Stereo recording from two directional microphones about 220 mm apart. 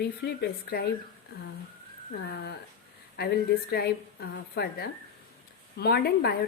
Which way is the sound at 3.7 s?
45° left (ahead or behind).